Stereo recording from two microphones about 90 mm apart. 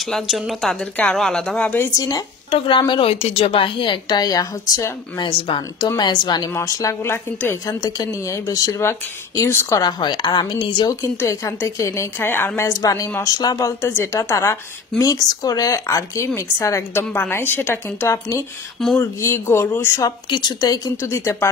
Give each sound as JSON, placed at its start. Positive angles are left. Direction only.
{"t": 0.0, "sound": "speech", "side_deg": 0}
{"t": 2.0, "sound": "a woman's voice", "side_deg": 45}
{"t": 2.9, "sound": "a woman's voice", "side_deg": 90}
{"t": 5.2, "sound": "speech", "side_deg": 75}
{"t": 5.8, "sound": "a woman's voice", "side_deg": 50}
{"t": 6.5, "sound": "a woman's voice", "side_deg": 40}
{"t": 7.8, "sound": "a woman's voice", "side_deg": 40}
{"t": 9.8, "sound": "a woman's voice", "side_deg": 55}
{"t": 11.2, "sound": "a woman's voice", "side_deg": 35}
{"t": 12.6, "sound": "a woman's voice", "side_deg": 40}
{"t": 20.2, "sound": "a woman's voice", "side_deg": 55}